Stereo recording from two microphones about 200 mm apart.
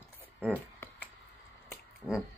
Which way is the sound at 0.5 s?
10° left (ahead or behind).